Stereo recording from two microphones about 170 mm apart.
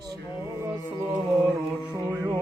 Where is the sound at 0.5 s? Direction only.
15° right (ahead or behind).